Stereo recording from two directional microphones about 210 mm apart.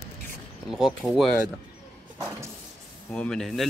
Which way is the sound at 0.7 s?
Centre (ahead or behind).